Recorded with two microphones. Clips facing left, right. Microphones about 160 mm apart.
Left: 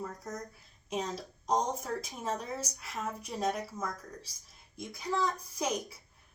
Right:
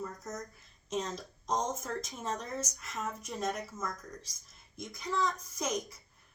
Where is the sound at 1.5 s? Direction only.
35° left (ahead or behind).